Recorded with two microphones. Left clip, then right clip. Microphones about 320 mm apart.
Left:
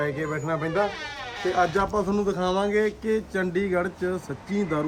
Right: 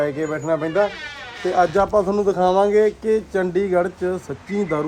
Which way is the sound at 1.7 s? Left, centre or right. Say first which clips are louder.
Right 7 dB; centre.